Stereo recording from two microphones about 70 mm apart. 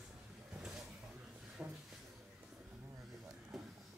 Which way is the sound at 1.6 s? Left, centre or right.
Centre.